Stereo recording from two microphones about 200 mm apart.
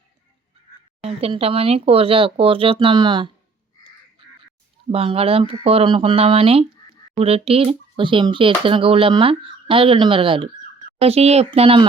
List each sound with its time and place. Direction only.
1.0 s speech: 30° right (ahead or behind)
4.9 s speech: 30° right (ahead or behind)